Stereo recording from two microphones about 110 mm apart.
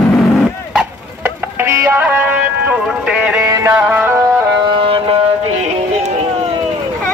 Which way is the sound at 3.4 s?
25° right (ahead or behind).